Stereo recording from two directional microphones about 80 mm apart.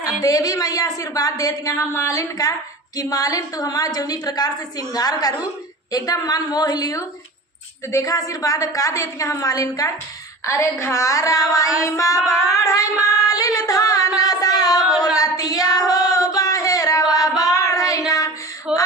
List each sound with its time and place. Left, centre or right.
0.2 s a woman's voice: left
10.4 s child singing: left
12.2 s child singing: centre
12.5 s a woman's voice: left
14.2 s music: left
14.9 s female singing: left
18.7 s a sound: centre